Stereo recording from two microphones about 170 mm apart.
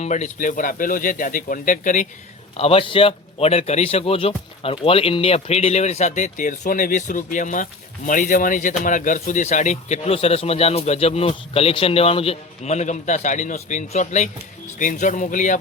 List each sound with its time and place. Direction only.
0.0 s speech: 45° left (ahead or behind)
2.6 s a man's voice: 35° left (ahead or behind)